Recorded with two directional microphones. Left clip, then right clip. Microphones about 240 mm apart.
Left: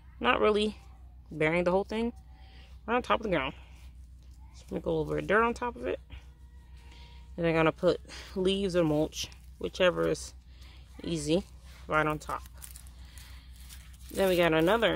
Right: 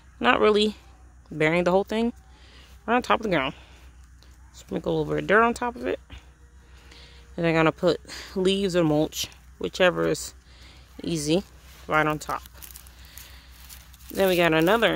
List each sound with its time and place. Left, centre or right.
0.2 s speech: right
14.1 s speech: right